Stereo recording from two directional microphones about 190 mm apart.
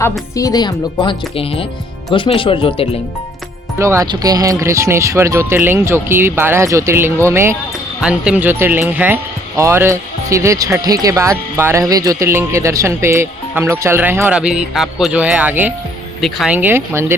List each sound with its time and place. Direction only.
0.3 s speech: 20° left (ahead or behind)
3.8 s speech: 15° right (ahead or behind)